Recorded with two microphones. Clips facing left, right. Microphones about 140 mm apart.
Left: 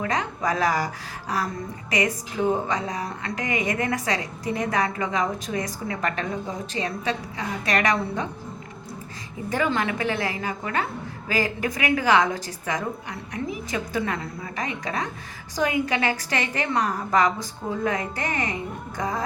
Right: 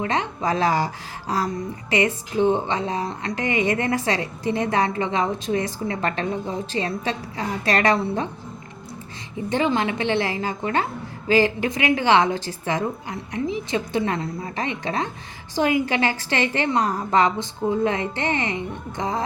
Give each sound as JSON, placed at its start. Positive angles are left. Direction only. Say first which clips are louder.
{"t": 0.0, "sound": "a woman's voice", "louder": "right 2 dB", "side_deg": -25}
{"t": 1.9, "sound": "a woman's voice", "louder": "right 3 dB", "side_deg": -30}
{"t": 9.5, "sound": "a woman's voice", "louder": "right 3 dB", "side_deg": -25}